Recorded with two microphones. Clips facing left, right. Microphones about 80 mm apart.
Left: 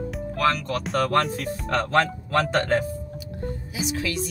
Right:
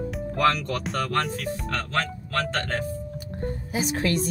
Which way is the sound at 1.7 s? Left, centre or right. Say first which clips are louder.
Left 8 dB; left.